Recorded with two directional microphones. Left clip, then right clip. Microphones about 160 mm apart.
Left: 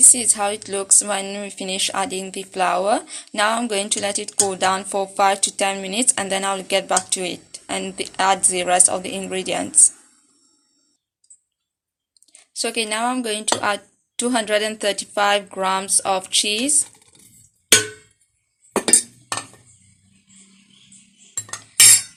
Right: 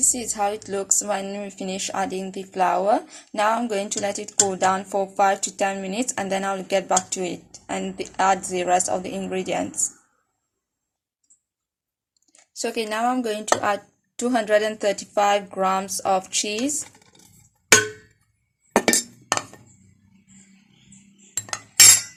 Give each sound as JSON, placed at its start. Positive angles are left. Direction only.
{"t": 0.1, "sound": "speech", "side_deg": -5}
{"t": 12.2, "sound": "speech", "side_deg": -5}
{"t": 21.3, "sound": "cutlery", "side_deg": -45}